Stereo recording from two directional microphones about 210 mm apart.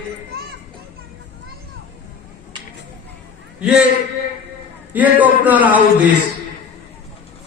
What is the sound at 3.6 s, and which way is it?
Speech, 5° right (ahead or behind).